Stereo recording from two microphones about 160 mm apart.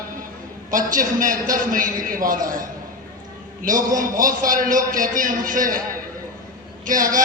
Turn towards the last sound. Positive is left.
turn(degrees=-55)  # may be behind; listen again after turning